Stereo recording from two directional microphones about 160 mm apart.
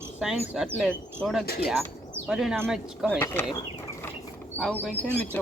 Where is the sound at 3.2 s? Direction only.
15° left (ahead or behind).